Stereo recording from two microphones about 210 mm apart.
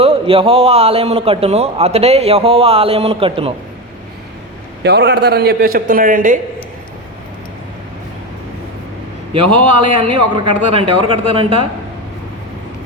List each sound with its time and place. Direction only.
0.0 s a man's voice: 25° right (ahead or behind)
4.8 s a man's voice: 55° right (ahead or behind)
9.7 s a man's voice: 25° right (ahead or behind)